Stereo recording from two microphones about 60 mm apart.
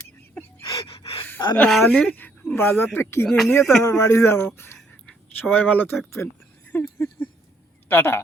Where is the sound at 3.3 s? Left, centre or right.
Centre.